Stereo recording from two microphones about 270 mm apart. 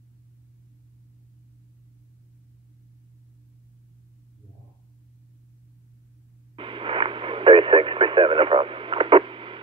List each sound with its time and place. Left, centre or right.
6.5 s radio: centre